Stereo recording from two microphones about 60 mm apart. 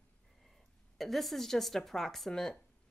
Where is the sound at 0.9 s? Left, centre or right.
Centre.